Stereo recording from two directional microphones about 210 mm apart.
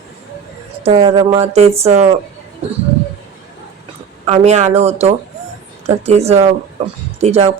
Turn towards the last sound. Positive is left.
turn(degrees=-30)  # may be behind; listen again after turning